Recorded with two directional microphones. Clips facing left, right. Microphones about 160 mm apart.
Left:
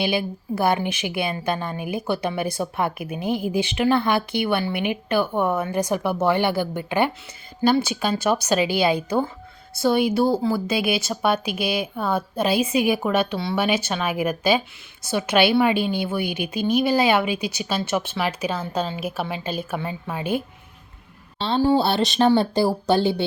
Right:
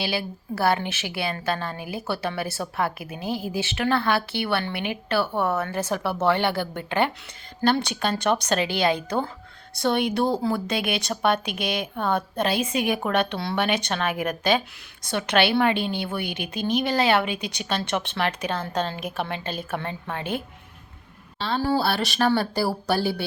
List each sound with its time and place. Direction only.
0.0 s a woman's voice: 20° left (ahead or behind)
21.3 s a woman's voice: 25° left (ahead or behind)